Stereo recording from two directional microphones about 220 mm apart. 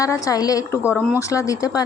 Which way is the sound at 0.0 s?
15° left (ahead or behind).